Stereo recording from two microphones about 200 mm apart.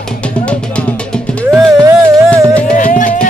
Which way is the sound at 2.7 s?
40° left (ahead or behind).